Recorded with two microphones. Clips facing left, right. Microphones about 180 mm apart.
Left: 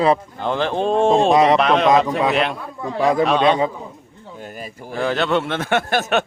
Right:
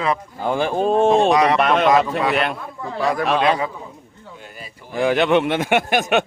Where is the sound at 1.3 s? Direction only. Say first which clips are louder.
Left 2 dB; 25° left (ahead or behind).